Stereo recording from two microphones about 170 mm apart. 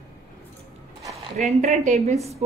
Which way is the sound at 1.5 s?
40° right (ahead or behind).